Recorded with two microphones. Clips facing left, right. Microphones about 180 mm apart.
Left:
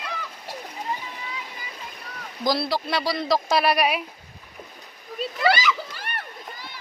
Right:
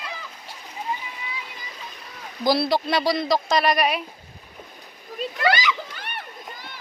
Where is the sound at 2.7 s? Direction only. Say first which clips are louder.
Right 4 dB; 20° right (ahead or behind).